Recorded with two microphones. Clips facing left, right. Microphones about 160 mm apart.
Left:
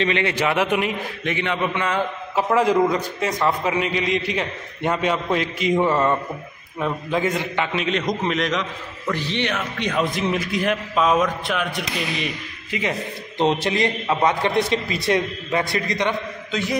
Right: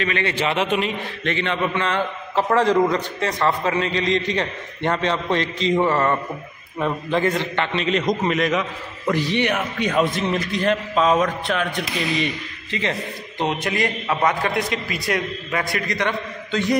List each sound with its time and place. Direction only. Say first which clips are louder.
0.0 s a man's voice: left 2 dB; 20° left (ahead or behind)
13.4 s a man's voice: left 3 dB; 30° left (ahead or behind)